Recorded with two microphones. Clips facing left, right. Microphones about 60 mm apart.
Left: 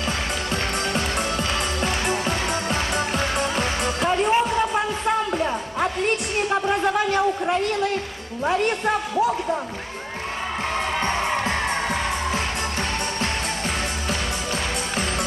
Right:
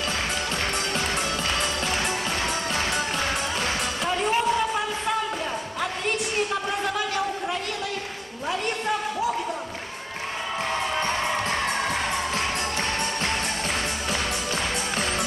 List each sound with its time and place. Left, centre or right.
0.9 s music: centre
3.3 s music: left
6.5 s a sound: left